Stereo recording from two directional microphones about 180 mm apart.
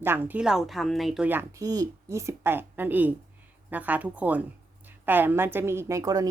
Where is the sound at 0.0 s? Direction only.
10° right (ahead or behind).